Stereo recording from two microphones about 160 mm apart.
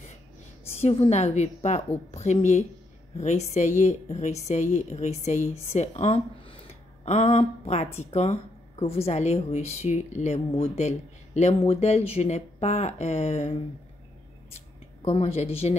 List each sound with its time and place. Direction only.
0.7 s speech: 40° left (ahead or behind)